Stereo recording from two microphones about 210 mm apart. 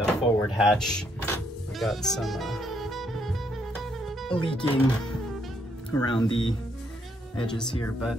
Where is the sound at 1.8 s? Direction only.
Centre (ahead or behind).